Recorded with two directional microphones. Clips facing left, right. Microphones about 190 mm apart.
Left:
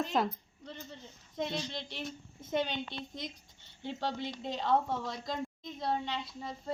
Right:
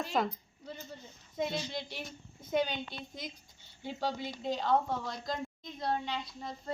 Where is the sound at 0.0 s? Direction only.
Centre (ahead or behind).